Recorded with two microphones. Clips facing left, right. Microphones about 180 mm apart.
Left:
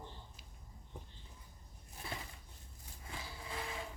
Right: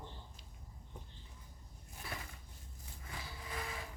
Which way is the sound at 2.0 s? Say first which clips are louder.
Left 1 dB; 25° left (ahead or behind).